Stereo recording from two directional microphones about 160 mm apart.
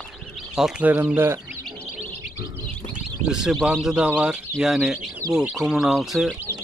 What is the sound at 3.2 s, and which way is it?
Speech, 5° right (ahead or behind).